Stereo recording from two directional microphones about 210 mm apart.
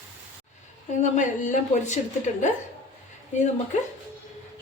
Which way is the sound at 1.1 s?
35° left (ahead or behind).